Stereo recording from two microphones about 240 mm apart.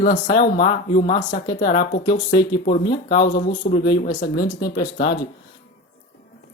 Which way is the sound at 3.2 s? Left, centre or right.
Left.